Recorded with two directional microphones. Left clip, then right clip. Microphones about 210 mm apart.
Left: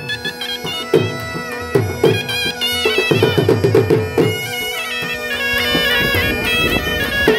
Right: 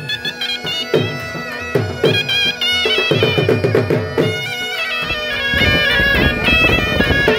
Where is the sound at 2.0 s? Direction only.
55° left (ahead or behind).